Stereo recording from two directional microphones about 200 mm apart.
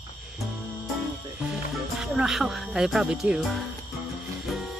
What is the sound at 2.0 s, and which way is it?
Speech, 5° right (ahead or behind).